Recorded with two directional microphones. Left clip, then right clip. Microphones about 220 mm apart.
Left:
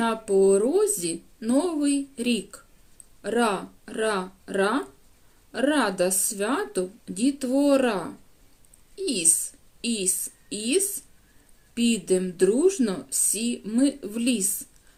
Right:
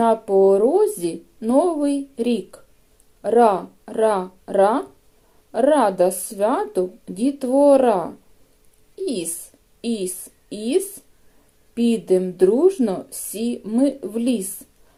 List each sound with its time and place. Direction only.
0.0 s a woman's voice: centre (ahead or behind)